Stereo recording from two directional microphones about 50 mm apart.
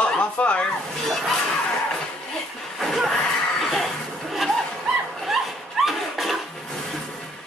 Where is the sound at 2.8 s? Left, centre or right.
Centre.